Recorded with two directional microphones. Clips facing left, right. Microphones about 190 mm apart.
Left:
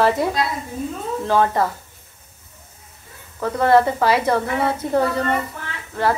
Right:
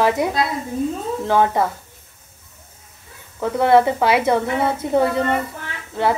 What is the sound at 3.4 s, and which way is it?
Speech, 15° right (ahead or behind).